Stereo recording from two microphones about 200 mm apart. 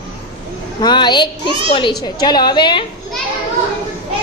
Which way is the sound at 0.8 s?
20° left (ahead or behind).